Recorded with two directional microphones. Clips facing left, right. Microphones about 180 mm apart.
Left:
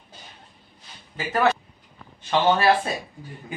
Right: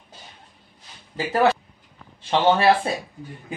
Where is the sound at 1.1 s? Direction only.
30° right (ahead or behind).